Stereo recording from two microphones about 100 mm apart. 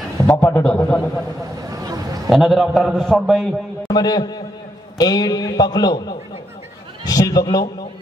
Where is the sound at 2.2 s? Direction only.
Centre (ahead or behind).